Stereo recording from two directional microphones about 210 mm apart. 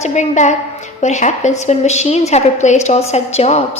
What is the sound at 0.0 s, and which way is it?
A woman's voice, 35° left (ahead or behind).